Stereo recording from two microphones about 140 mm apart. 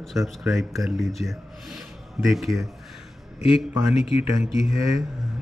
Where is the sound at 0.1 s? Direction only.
Centre (ahead or behind).